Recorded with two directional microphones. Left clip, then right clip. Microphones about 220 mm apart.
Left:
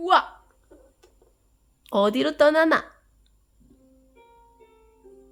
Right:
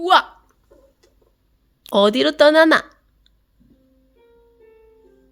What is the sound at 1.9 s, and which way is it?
Speech, 20° right (ahead or behind).